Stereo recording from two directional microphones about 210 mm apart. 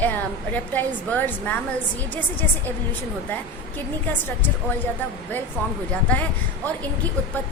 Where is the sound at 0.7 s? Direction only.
10° left (ahead or behind).